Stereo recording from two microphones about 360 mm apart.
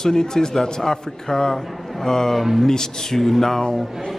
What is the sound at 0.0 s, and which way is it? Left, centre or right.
A man's voice, centre.